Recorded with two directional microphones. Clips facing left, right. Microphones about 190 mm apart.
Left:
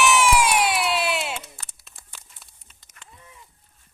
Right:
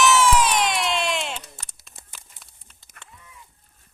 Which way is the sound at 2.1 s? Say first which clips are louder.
Left 2 dB; centre (ahead or behind).